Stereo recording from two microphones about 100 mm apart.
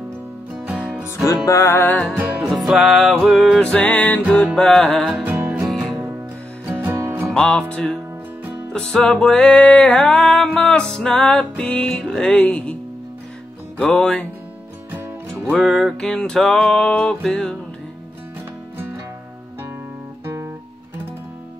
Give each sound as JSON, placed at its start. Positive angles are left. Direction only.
{"t": 0.9, "sound": "music", "side_deg": -10}
{"t": 1.2, "sound": "music", "side_deg": 35}
{"t": 2.1, "sound": "music", "side_deg": -20}
{"t": 2.5, "sound": "music", "side_deg": -5}
{"t": 5.2, "sound": "music", "side_deg": -15}
{"t": 7.2, "sound": "music", "side_deg": 10}
{"t": 13.7, "sound": "music", "side_deg": 10}
{"t": 15.5, "sound": "music", "side_deg": 5}